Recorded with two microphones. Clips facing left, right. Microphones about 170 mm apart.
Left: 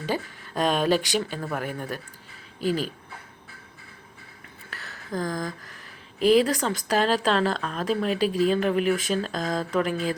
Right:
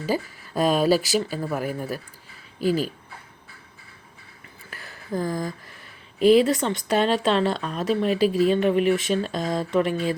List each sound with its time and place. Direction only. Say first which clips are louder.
0.0 s speech: right 3 dB; 5° right (ahead or behind)
2.6 s speech: right 3 dB; 40° right (ahead or behind)
4.7 s a sound: right 3 dB; 10° right (ahead or behind)
6.1 s speech: right 3 dB; centre (ahead or behind)